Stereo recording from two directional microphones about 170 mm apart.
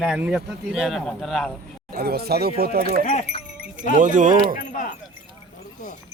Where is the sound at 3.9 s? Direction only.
50° right (ahead or behind).